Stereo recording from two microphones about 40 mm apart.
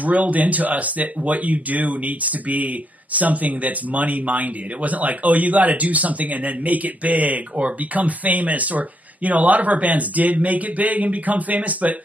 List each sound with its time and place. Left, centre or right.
0.0 s speech: right